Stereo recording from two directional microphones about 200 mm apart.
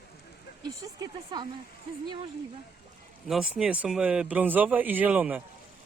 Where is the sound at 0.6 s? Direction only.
20° right (ahead or behind).